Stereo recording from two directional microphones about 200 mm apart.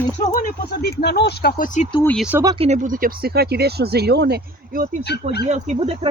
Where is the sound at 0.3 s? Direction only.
45° left (ahead or behind).